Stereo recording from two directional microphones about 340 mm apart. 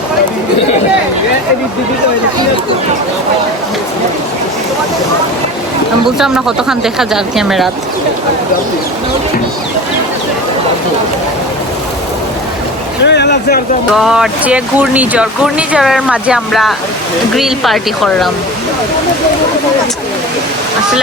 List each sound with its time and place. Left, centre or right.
6.1 s speech: centre
13.1 s speech: left
13.9 s speech: centre